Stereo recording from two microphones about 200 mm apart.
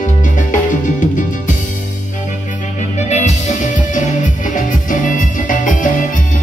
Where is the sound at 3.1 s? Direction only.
35° left (ahead or behind).